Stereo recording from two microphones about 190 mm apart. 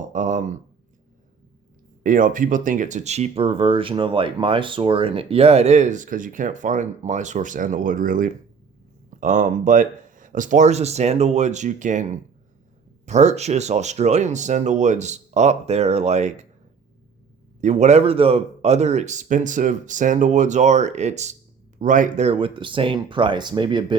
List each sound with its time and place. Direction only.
0.1 s a sound: 40° right (ahead or behind)
2.0 s speech: 45° right (ahead or behind)
17.6 s speech: 40° right (ahead or behind)